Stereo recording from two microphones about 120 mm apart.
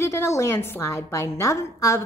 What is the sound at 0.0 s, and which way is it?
A woman's voice, 20° left (ahead or behind).